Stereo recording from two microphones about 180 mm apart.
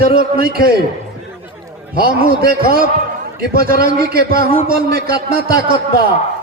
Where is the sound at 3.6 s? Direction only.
55° right (ahead or behind).